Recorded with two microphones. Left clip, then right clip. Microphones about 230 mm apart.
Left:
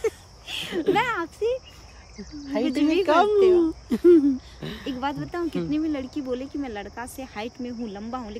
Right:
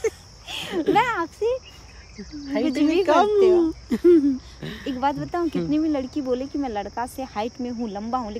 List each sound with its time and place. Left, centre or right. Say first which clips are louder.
0.5 s a sound: right 1 dB; centre
0.9 s speech: right 3 dB; centre
2.8 s speech: right 2 dB; centre
3.1 s speech: right 1 dB; centre
3.3 s speech: right 1 dB; centre
3.6 s speech: even; centre
5.0 s speech: right 5 dB; centre